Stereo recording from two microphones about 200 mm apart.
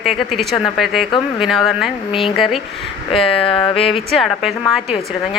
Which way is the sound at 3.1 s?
30° left (ahead or behind).